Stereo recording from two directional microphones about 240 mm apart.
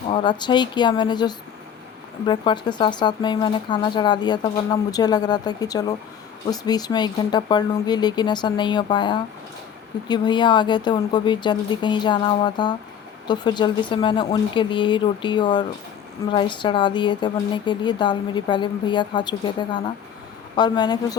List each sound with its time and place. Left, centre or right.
0.1 s speech: centre